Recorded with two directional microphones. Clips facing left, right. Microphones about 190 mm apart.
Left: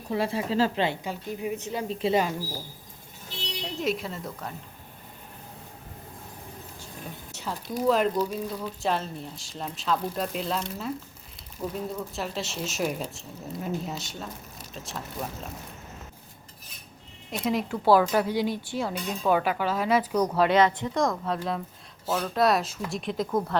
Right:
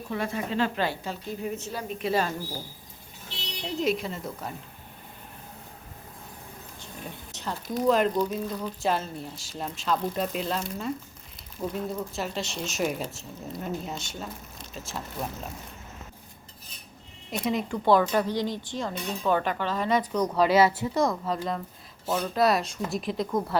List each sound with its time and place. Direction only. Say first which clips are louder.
0.1 s speech: left 3 dB; 30° left (ahead or behind)
0.8 s a woman's voice: left 2 dB; 15° left (ahead or behind)
1.9 s speech: left 3 dB; 30° left (ahead or behind)
3.8 s speech: right 2 dB; centre (ahead or behind)
7.3 s speech: right 1 dB; 5° left (ahead or behind)
17.3 s speech: even; centre (ahead or behind)